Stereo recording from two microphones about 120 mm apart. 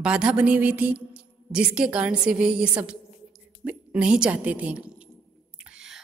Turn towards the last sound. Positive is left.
turn(degrees=-5)  # may be behind; listen again after turning